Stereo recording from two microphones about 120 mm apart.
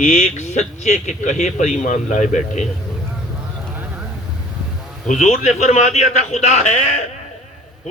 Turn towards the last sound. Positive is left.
turn(degrees=75)  # may be behind; listen again after turning